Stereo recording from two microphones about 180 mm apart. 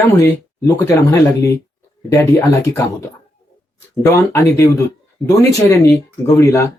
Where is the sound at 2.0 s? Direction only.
15° left (ahead or behind).